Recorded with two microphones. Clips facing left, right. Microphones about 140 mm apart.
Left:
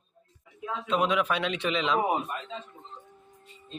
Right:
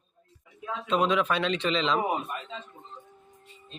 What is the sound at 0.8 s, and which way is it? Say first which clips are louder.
A man's voice: right 1 dB; 5° left (ahead or behind).